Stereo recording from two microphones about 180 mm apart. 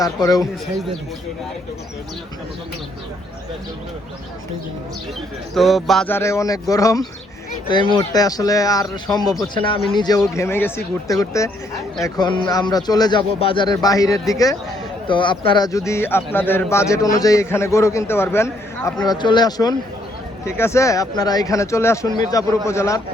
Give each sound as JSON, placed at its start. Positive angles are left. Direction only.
{"t": 0.0, "sound": "speech", "side_deg": 20}
{"t": 5.5, "sound": "speech", "side_deg": 0}
{"t": 6.1, "sound": "speech", "side_deg": 15}